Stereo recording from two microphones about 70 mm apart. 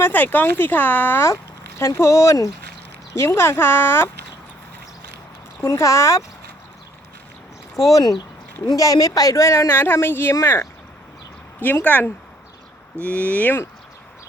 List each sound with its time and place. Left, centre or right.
0.0 s speech: left
1.8 s speech: left
5.6 s speech: left
8.6 s speech: left
9.6 s speech: left